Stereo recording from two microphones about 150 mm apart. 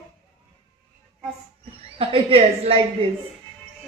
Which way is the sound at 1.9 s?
40° right (ahead or behind).